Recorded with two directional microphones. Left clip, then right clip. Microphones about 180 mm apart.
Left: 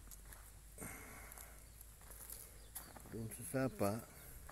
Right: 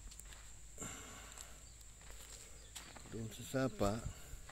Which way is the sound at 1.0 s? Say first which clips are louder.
Right 2 dB; 10° right (ahead or behind).